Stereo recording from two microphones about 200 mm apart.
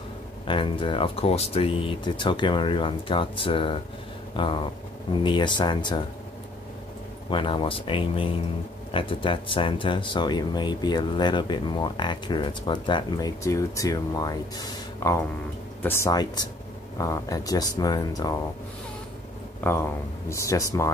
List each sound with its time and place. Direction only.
0.5 s speech: 25° left (ahead or behind)
7.2 s speech: 25° left (ahead or behind)
19.6 s speech: 15° left (ahead or behind)